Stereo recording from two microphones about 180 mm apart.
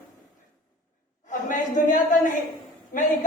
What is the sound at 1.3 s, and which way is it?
Speech, 45° left (ahead or behind).